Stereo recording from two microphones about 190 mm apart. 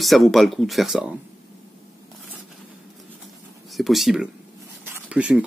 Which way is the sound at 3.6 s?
Centre (ahead or behind).